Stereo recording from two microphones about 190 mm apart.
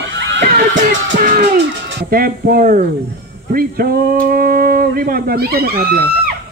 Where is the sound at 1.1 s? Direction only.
45° right (ahead or behind).